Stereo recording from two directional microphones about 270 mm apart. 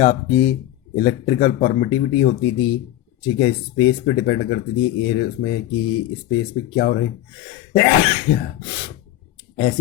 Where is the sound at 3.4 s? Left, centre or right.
Left.